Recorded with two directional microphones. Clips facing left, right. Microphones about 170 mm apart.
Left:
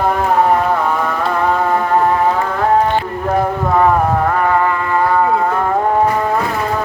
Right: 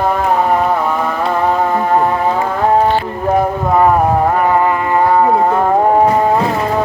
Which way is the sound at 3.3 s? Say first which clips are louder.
Right 2 dB; 15° right (ahead or behind).